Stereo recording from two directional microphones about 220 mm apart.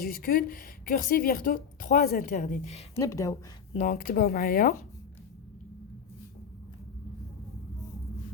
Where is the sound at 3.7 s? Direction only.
35° left (ahead or behind).